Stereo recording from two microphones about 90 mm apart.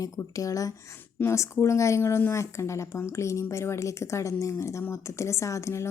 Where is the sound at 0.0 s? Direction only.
40° left (ahead or behind).